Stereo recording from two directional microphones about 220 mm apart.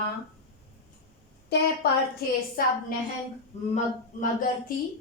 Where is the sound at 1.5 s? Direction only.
50° left (ahead or behind).